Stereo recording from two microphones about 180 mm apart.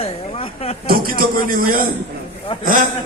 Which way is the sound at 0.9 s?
55° right (ahead or behind).